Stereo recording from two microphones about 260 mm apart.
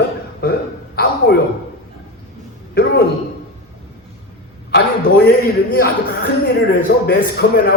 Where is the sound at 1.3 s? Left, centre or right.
Left.